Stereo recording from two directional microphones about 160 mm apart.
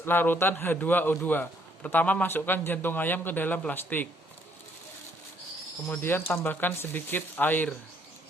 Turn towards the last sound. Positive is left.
turn(degrees=10)  # may be behind; listen again after turning